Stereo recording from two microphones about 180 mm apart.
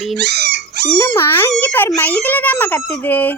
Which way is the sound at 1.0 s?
15° left (ahead or behind).